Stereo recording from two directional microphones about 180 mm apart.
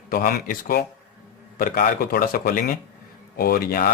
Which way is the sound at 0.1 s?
55° left (ahead or behind).